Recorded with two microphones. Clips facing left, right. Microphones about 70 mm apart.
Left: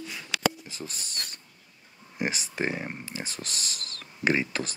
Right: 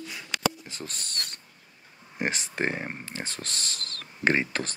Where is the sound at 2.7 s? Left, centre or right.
Right.